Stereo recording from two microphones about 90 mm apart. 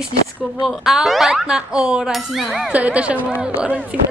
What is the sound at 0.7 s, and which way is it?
A woman's voice, centre (ahead or behind).